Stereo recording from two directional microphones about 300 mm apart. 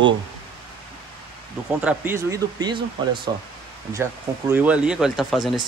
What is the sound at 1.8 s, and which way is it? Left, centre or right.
Speech, centre.